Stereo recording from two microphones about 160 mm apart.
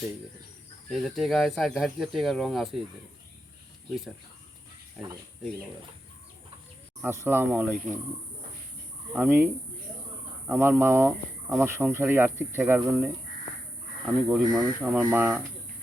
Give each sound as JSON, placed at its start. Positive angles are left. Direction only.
{"t": 0.9, "sound": "speech", "side_deg": 0}
{"t": 7.0, "sound": "speech", "side_deg": -15}
{"t": 9.1, "sound": "speech", "side_deg": -15}
{"t": 14.3, "sound": "speech", "side_deg": -5}